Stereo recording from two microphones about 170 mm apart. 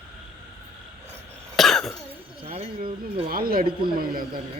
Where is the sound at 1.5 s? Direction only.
Centre (ahead or behind).